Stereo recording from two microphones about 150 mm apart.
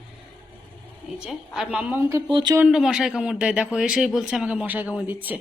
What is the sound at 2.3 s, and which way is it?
Speech, 30° right (ahead or behind).